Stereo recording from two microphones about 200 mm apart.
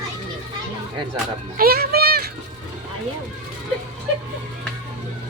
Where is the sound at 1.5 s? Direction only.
50° right (ahead or behind).